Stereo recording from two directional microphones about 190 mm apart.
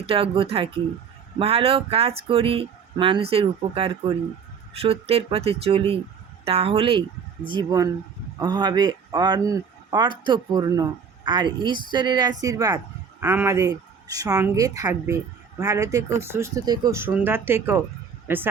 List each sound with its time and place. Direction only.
0.0 s speech: 30° right (ahead or behind); by 18.4 s 10° right (ahead or behind)